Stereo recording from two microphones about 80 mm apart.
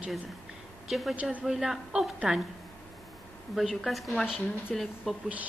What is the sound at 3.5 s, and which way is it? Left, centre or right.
A woman's voice, centre.